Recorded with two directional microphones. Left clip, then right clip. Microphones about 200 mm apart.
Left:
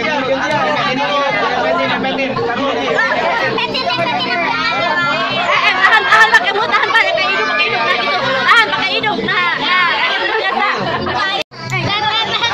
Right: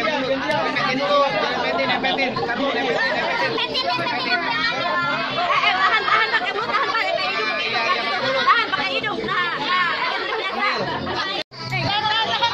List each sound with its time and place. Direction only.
5.5 s chatter: 20° left (ahead or behind)